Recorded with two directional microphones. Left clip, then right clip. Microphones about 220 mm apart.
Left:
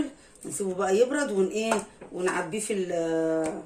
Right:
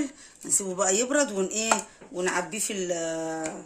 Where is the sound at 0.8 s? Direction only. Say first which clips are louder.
Left 1 dB; 50° right (ahead or behind).